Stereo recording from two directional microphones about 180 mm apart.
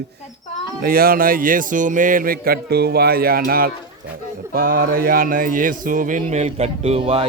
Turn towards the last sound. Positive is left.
turn(degrees=-35)  # may be behind; listen again after turning